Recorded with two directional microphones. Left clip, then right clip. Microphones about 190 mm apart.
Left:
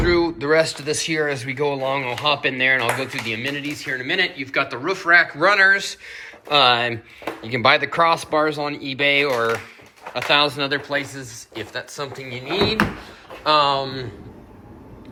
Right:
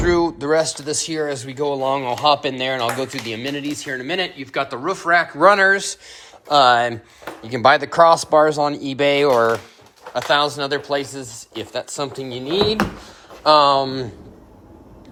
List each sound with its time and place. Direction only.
0.0 s speech: 30° right (ahead or behind)
6.5 s speech: 20° right (ahead or behind)
10.2 s speech: 20° right (ahead or behind)
10.6 s speech: 30° right (ahead or behind); by 12.5 s 45° right (ahead or behind)
13.4 s speech: 35° right (ahead or behind)